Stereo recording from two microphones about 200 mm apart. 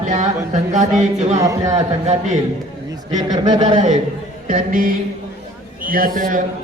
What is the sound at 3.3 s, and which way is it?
Speech, 20° right (ahead or behind).